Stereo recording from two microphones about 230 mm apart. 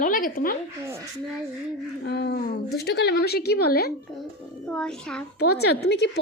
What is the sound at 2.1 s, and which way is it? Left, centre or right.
A woman's voice, left.